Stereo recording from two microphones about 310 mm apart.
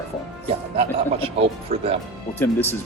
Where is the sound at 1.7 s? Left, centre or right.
Centre.